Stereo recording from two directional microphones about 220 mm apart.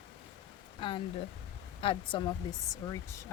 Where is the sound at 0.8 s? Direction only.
20° left (ahead or behind).